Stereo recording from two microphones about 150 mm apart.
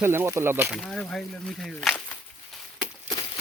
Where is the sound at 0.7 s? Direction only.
5° left (ahead or behind).